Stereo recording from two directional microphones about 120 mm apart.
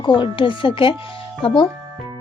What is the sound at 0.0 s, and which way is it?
A woman's voice, 40° left (ahead or behind).